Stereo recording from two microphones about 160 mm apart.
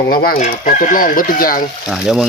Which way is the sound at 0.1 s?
65° left (ahead or behind).